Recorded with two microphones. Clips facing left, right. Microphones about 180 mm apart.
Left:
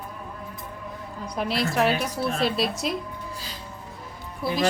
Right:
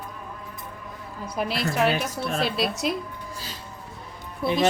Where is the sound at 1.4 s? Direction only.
Centre (ahead or behind).